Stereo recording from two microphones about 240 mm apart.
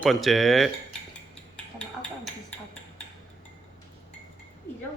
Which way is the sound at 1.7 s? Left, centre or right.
Centre.